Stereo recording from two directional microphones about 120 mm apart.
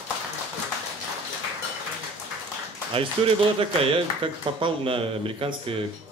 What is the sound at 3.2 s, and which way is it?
A man's voice, 55° right (ahead or behind).